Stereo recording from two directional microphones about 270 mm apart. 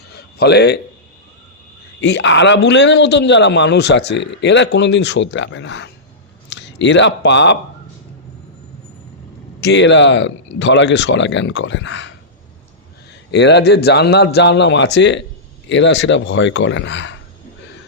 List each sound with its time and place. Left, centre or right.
0.1 s a sound: left
2.0 s a man's voice: left
9.6 s speech: left
13.3 s a man's voice: left